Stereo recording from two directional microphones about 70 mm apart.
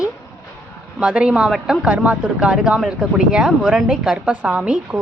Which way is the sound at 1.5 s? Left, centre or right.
Centre.